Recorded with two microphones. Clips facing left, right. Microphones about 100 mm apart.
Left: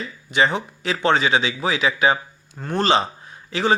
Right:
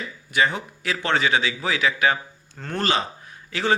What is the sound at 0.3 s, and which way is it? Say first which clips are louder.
A man's voice: left 3 dB; 25° left (ahead or behind).